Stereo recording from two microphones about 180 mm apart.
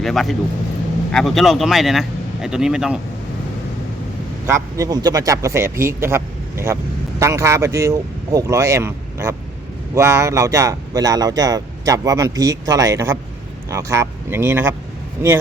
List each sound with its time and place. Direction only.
0.0 s speech: centre (ahead or behind)
4.4 s speech: 15° right (ahead or behind)